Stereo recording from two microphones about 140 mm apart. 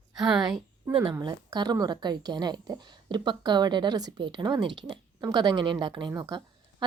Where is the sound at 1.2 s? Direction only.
30° right (ahead or behind).